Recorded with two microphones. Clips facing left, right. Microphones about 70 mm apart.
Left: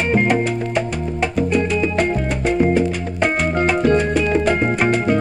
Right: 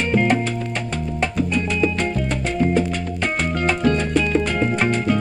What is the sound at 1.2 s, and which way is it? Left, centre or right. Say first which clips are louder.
Music: left 4 dB; centre.